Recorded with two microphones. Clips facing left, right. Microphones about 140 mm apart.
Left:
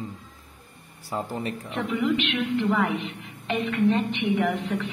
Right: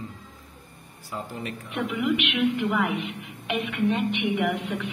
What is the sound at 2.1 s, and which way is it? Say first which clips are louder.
A woman's voice: right 4 dB; 10° right (ahead or behind).